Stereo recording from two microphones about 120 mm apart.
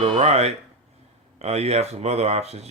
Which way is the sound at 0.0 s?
60° right (ahead or behind).